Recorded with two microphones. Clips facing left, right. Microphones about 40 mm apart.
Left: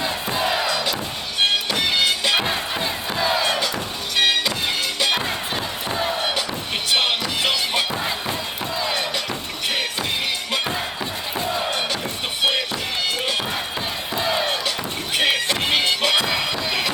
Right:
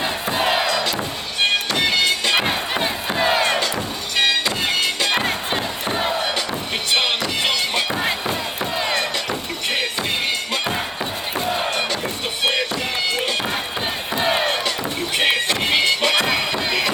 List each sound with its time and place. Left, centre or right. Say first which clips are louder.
0.3 s music: right 3 dB; right
2.2 s music: right 1 dB; right
2.5 s crowd: right 2 dB; right
5.1 s music: right 3 dB; right
6.9 s music: right 1 dB; centre
8.8 s a sound: right 2 dB; right
14.2 s music: right 2 dB; right
15.2 s music: right 1 dB; right
16.5 s run: right 2 dB; right